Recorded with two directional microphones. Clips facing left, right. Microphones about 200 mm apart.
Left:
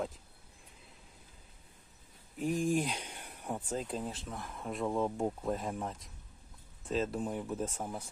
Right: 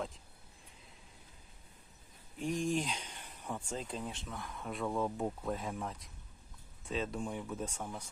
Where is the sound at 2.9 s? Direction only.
10° left (ahead or behind).